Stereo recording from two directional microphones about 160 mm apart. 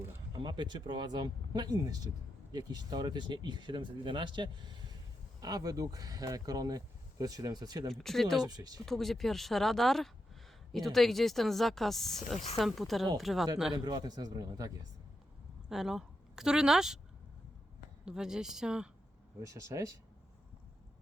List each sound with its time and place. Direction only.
0.3 s speech: 30° right (ahead or behind)
7.9 s a woman's voice: centre (ahead or behind)
8.4 s speech: 25° right (ahead or behind)
8.8 s a woman's voice: centre (ahead or behind)
13.7 s speech: 25° right (ahead or behind)
15.7 s a woman's voice: 5° right (ahead or behind)
18.0 s a woman's voice: 5° right (ahead or behind)
19.4 s speech: 20° right (ahead or behind)